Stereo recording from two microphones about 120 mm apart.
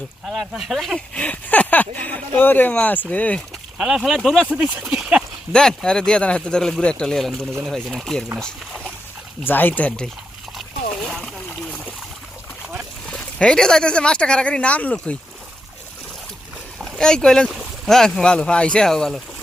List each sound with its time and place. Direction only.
0.3 s speech: centre (ahead or behind)
1.1 s speech: 10° left (ahead or behind)
3.8 s speech: 5° right (ahead or behind)
4.4 s speech: 15° right (ahead or behind)
5.5 s speech: 5° left (ahead or behind)
9.4 s speech: 15° left (ahead or behind)
11.1 s splash: centre (ahead or behind)
13.1 s speech: 10° left (ahead or behind)
16.8 s speech: 5° left (ahead or behind)